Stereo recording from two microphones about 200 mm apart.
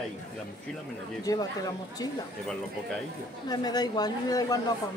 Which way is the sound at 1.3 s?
20° left (ahead or behind).